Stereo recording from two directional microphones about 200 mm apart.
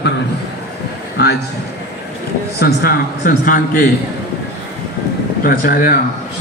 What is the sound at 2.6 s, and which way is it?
A man's voice, 45° left (ahead or behind).